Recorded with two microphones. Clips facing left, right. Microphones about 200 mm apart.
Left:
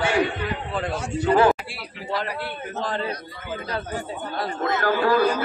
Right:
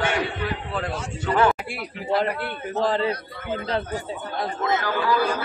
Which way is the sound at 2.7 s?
30° right (ahead or behind).